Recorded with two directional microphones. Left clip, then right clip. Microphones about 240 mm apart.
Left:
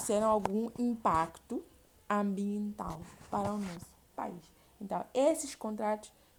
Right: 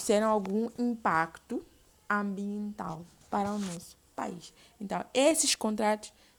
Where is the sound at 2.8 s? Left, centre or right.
Right.